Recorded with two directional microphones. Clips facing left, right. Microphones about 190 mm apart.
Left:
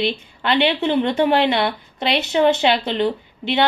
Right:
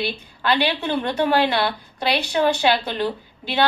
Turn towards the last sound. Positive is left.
turn(degrees=20)  # may be behind; listen again after turning